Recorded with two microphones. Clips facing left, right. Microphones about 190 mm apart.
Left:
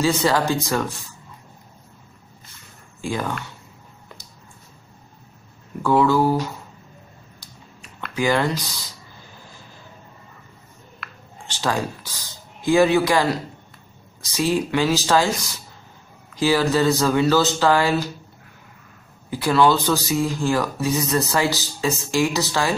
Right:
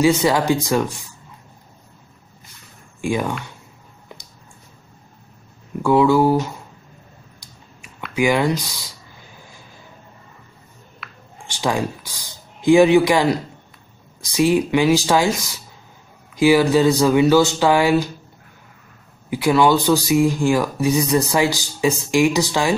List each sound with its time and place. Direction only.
0.0 s speech: 15° right (ahead or behind)
3.0 s speech: 15° right (ahead or behind)
5.8 s speech: 15° right (ahead or behind)
8.1 s speech: 10° right (ahead or behind)
11.0 s a sound: centre (ahead or behind)
11.4 s speech: 15° right (ahead or behind)
16.3 s speech: 15° right (ahead or behind)
19.3 s speech: 15° right (ahead or behind)